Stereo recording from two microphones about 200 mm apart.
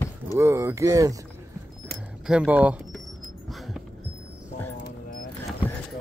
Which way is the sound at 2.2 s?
5° right (ahead or behind).